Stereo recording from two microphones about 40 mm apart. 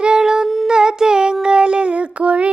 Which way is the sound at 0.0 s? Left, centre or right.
Centre.